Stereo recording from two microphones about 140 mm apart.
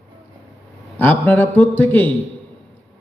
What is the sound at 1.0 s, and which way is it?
A man's voice, 15° left (ahead or behind).